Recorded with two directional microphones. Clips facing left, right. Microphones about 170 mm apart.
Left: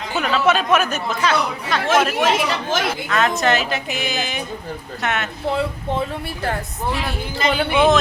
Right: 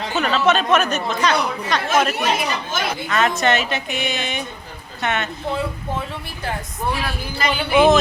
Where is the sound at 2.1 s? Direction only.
90° left.